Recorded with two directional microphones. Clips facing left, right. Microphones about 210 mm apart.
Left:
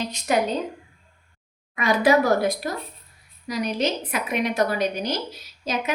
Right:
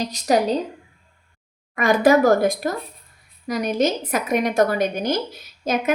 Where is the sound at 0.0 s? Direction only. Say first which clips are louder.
Right 4 dB; 40° right (ahead or behind).